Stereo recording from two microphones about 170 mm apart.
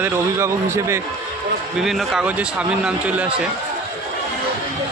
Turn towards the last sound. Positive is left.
turn(degrees=-5)  # may be behind; listen again after turning